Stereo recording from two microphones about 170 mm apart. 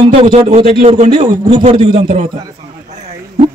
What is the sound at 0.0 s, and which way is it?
Speech, 35° right (ahead or behind).